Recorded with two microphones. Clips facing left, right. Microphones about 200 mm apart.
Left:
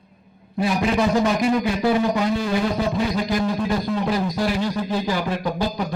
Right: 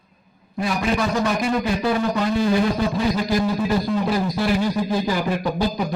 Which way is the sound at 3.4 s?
5° right (ahead or behind).